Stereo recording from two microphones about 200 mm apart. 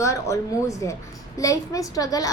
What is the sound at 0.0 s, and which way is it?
A woman's voice, 15° left (ahead or behind).